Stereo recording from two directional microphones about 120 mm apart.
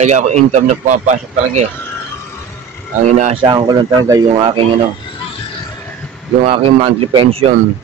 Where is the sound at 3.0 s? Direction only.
70° right (ahead or behind).